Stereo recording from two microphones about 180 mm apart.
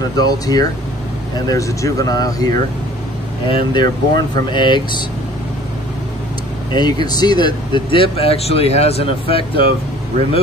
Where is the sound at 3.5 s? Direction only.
25° left (ahead or behind).